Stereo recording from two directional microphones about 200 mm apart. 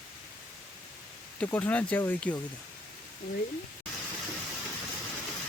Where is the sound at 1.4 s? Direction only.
5° left (ahead or behind).